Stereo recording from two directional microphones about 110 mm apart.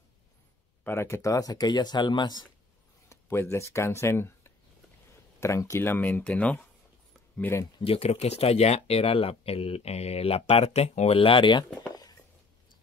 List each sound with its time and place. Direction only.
0.8 s speech: 25° left (ahead or behind); by 2.4 s 40° left (ahead or behind)
3.1 s speech: 25° left (ahead or behind)
7.8 s speech: 65° left (ahead or behind); by 11.6 s 50° left (ahead or behind)
11.9 s a sound: 35° left (ahead or behind)